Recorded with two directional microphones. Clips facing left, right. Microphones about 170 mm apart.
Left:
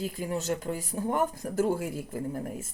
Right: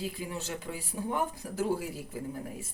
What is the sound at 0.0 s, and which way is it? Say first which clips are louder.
Speech: left 5 dB; 45° left (ahead or behind).